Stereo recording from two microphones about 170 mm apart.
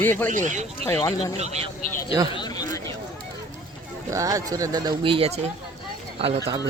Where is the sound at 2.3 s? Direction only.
25° left (ahead or behind).